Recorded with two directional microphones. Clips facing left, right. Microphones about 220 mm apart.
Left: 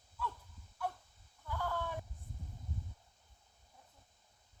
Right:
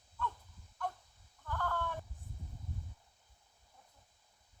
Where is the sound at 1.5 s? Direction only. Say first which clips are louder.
Right 1 dB; 10° left (ahead or behind).